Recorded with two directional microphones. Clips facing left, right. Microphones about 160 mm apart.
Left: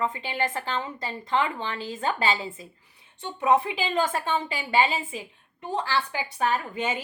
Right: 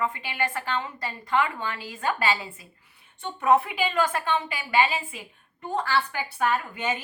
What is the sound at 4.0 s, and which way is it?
A woman's voice, 25° left (ahead or behind).